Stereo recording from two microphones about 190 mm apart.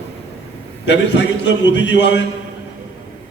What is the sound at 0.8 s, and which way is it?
A man's voice, 70° left (ahead or behind).